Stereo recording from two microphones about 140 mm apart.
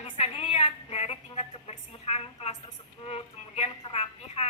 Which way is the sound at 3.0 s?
45° left (ahead or behind).